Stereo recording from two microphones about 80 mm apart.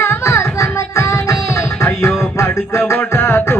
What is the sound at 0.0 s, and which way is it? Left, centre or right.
Music, left.